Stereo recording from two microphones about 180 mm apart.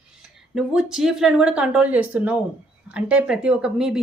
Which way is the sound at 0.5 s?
5° right (ahead or behind).